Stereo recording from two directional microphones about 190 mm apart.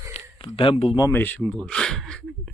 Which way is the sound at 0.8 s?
25° left (ahead or behind).